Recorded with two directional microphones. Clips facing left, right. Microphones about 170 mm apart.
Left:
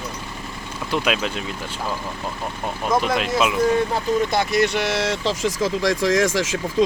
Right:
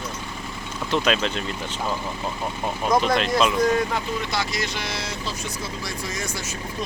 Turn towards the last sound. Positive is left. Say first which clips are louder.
# left 12 dB
turn(degrees=90)